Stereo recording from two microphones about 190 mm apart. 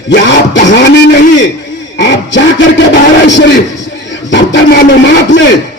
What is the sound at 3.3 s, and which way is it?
Music, 70° left (ahead or behind).